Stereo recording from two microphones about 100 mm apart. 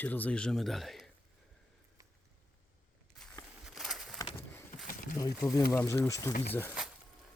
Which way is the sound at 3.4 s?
40° left (ahead or behind).